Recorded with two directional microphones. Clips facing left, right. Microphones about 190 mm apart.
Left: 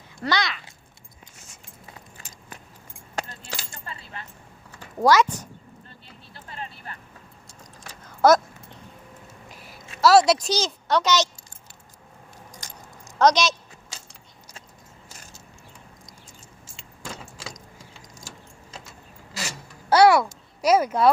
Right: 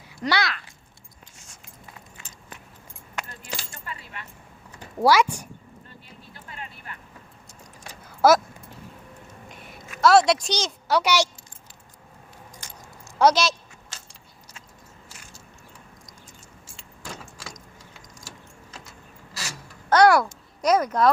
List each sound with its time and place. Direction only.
0.2 s speech: 10° right (ahead or behind)
3.2 s keys jangling: 30° left (ahead or behind)
4.9 s speech: 10° right (ahead or behind)
6.3 s vehicle: 35° left (ahead or behind)
8.2 s speech: 5° right (ahead or behind)
9.5 s a sound: centre (ahead or behind)
10.0 s a child's voice: centre (ahead or behind)
12.6 s keys jangling: 40° left (ahead or behind)
13.1 s speech: 5° right (ahead or behind)
19.9 s babbling: 5° left (ahead or behind)
20.2 s speech: 5° left (ahead or behind)